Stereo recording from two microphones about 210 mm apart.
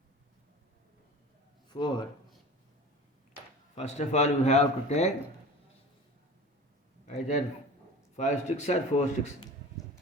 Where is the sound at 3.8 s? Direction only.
30° left (ahead or behind).